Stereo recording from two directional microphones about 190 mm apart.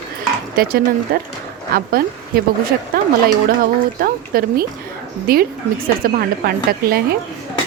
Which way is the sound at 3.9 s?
50° right (ahead or behind).